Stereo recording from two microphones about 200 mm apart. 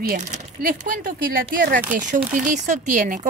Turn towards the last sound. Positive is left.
turn(degrees=-40)  # may be behind; listen again after turning